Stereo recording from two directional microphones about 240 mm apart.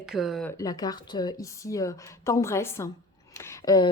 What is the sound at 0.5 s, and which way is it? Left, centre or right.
Speech, centre.